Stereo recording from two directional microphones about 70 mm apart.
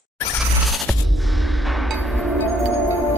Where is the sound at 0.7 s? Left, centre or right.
Centre.